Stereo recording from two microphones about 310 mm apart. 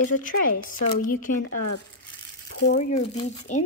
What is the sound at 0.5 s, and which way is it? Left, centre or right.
Speech, left.